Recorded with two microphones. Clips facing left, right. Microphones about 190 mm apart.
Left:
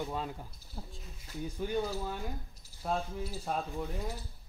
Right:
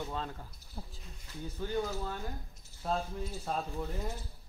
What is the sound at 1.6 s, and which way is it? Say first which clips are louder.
Speech: left 1 dB; 15° left (ahead or behind).